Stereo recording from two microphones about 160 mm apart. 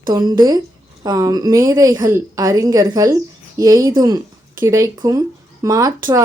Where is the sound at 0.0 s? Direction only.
25° right (ahead or behind).